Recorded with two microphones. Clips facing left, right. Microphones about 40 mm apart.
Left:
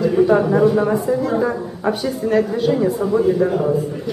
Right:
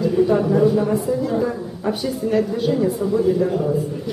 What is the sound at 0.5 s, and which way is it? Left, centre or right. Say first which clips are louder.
Speech: left 2 dB; left.